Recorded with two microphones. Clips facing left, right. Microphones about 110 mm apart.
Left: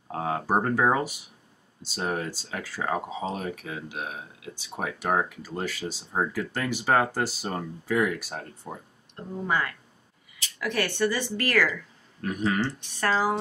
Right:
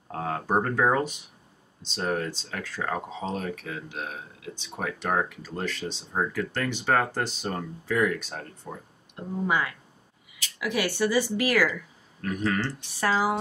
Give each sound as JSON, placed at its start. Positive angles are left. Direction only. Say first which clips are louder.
{"t": 0.1, "sound": "speech", "louder": "left 1 dB", "side_deg": 5}
{"t": 9.1, "sound": "speech", "louder": "right 1 dB", "side_deg": -10}
{"t": 12.2, "sound": "speech", "louder": "left 1 dB", "side_deg": 10}
{"t": 13.0, "sound": "speech", "louder": "even", "side_deg": -10}